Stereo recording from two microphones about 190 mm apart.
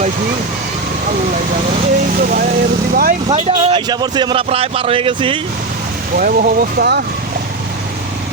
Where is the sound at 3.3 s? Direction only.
30° right (ahead or behind).